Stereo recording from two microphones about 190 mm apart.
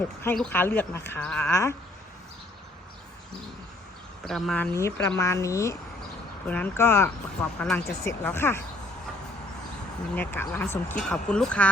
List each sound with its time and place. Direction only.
0.3 s speech: 10° left (ahead or behind)
4.3 s speech: centre (ahead or behind)
10.2 s speech: 10° left (ahead or behind)